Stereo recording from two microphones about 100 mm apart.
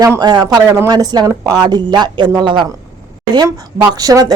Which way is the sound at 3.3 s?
40° right (ahead or behind).